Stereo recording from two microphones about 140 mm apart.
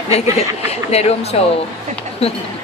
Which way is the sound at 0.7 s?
50° left (ahead or behind).